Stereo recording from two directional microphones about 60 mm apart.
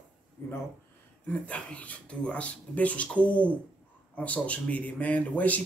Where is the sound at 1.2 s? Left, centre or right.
Left.